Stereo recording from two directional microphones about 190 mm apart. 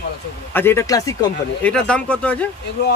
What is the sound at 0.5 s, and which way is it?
Speech, 10° left (ahead or behind).